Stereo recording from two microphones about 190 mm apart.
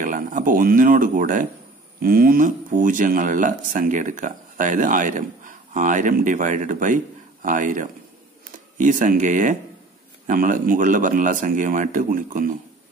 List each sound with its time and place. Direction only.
0.0 s speech: 45° right (ahead or behind)